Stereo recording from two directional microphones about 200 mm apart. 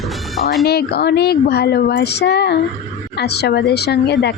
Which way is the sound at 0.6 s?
55° left (ahead or behind).